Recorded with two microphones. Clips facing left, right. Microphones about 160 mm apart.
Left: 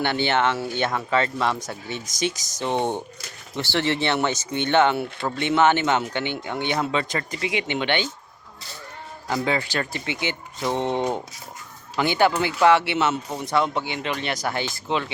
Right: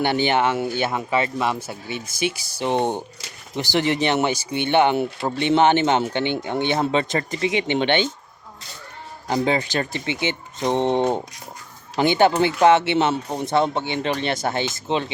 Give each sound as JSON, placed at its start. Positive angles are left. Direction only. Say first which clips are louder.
{"t": 0.0, "sound": "speech", "louder": "right 2 dB", "side_deg": -15}
{"t": 9.2, "sound": "speech", "louder": "right 3 dB", "side_deg": -20}